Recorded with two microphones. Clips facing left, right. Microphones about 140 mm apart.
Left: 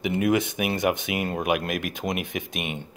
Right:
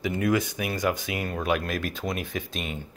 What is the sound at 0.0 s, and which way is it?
Speech, 20° left (ahead or behind).